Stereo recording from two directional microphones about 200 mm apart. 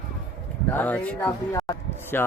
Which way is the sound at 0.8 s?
10° left (ahead or behind).